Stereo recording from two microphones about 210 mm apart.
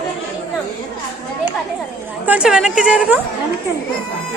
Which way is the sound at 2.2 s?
5° right (ahead or behind).